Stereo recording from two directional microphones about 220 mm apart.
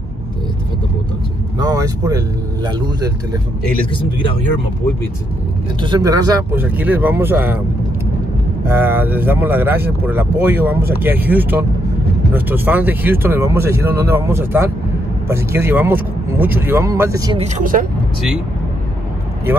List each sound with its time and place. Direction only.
1.6 s speech: 15° right (ahead or behind)
5.8 s speech: 20° right (ahead or behind)
8.6 s speech: 10° right (ahead or behind)
17.4 s speech: 35° right (ahead or behind)